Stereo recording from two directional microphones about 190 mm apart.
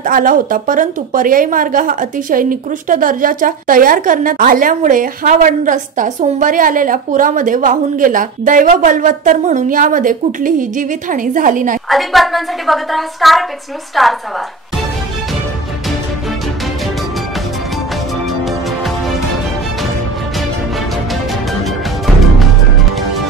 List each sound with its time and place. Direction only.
0.0 s a woman's voice: 45° right (ahead or behind)
11.9 s a woman's voice: centre (ahead or behind)
21.6 s music: centre (ahead or behind)